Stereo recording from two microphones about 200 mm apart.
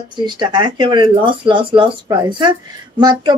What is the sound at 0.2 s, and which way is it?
Speech, 20° right (ahead or behind).